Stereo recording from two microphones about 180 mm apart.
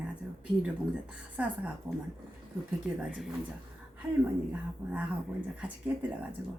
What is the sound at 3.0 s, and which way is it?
Speech, 5° right (ahead or behind).